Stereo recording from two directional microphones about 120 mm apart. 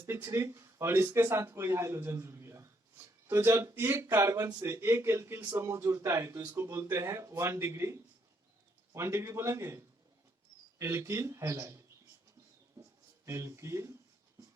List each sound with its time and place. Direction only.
0.0 s speech: 20° right (ahead or behind)
12.8 s a sound: 25° right (ahead or behind)
13.2 s speech: 25° right (ahead or behind)